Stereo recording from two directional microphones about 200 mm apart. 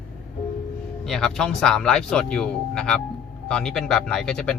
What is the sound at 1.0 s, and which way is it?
Speech, centre (ahead or behind).